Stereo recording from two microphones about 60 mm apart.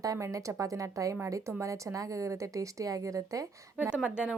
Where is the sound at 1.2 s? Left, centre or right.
Right.